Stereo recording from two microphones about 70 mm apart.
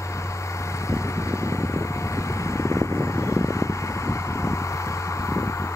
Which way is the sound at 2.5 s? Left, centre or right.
Left.